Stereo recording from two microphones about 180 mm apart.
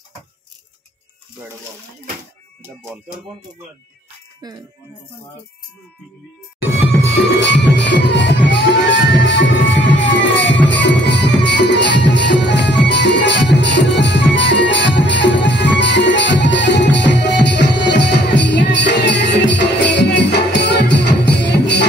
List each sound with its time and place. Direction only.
4.4 s music: 20° right (ahead or behind)
7.3 s music: 75° left (ahead or behind)